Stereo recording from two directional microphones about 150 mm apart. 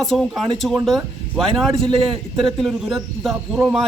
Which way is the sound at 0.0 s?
Centre (ahead or behind).